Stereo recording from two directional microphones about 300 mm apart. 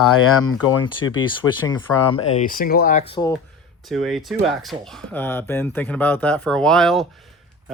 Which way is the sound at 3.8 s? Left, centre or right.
Centre.